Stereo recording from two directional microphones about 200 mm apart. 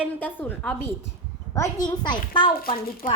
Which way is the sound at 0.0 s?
10° left (ahead or behind).